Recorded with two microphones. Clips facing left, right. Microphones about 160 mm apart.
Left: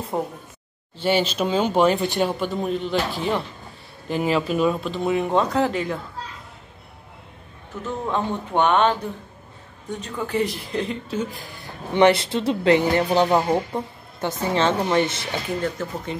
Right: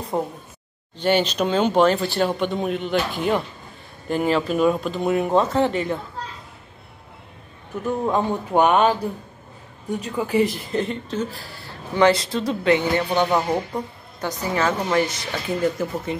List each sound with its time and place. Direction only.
0.1 s speech: centre (ahead or behind); by 2.3 s 15° left (ahead or behind)
2.3 s speech: centre (ahead or behind)
7.8 s speech: 15° right (ahead or behind)
11.1 s speech: 15° left (ahead or behind)
15.6 s speech: 10° right (ahead or behind)